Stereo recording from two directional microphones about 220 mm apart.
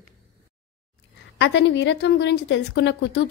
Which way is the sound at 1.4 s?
55° left (ahead or behind).